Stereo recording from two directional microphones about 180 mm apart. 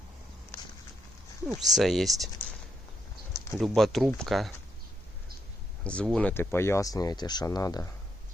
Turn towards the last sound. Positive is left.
turn(degrees=20)  # may be behind; listen again after turning